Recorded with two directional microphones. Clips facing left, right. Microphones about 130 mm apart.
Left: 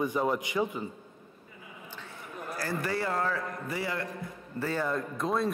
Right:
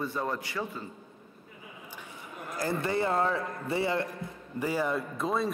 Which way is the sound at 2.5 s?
20° right (ahead or behind).